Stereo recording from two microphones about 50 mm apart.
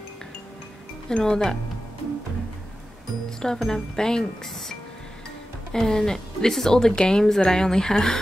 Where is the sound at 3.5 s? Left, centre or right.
Centre.